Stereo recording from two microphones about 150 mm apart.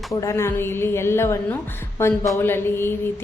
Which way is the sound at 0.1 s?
20° left (ahead or behind).